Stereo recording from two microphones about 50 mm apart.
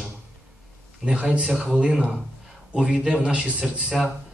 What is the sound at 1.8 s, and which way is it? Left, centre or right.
A man's voice, centre.